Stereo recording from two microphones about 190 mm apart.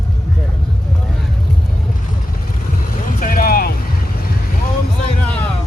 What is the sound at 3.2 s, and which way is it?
Vehicle, 50° left (ahead or behind).